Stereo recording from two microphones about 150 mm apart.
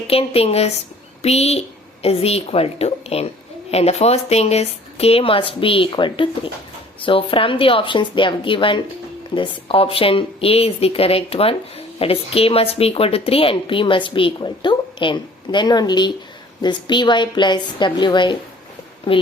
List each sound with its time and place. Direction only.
0.1 s a woman's voice: 40° left (ahead or behind)